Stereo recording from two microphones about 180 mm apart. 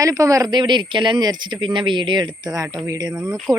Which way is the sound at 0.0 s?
20° right (ahead or behind).